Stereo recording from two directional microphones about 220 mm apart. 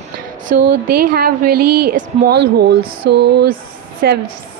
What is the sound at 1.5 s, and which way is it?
Speech, 90° right.